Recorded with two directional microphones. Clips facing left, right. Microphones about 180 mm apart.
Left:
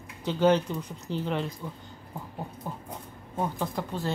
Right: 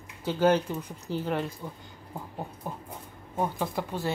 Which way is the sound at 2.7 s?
15° right (ahead or behind).